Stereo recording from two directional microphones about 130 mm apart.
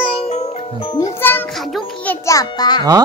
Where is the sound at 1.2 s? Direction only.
15° left (ahead or behind); by 2.8 s 30° left (ahead or behind).